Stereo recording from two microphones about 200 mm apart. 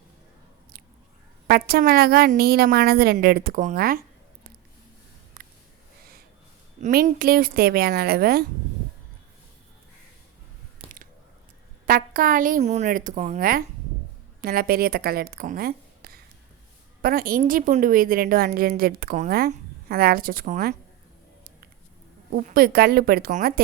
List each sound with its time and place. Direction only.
1.5 s a woman's voice: 50° right (ahead or behind)
5.4 s a sound: 45° right (ahead or behind)
6.8 s a woman's voice: 45° right (ahead or behind)
10.8 s a sound: 30° right (ahead or behind)
11.9 s a woman's voice: 45° right (ahead or behind)
22.3 s a woman's voice: 50° right (ahead or behind)